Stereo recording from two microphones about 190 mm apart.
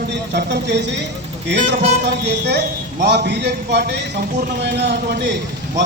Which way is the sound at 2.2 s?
65° right (ahead or behind).